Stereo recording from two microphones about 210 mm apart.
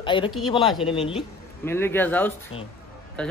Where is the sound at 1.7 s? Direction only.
10° left (ahead or behind).